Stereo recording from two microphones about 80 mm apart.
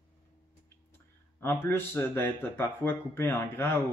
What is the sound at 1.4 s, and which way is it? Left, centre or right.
Speech, left.